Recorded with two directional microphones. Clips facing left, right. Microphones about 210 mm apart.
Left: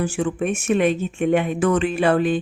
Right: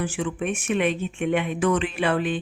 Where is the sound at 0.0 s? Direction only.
45° left (ahead or behind).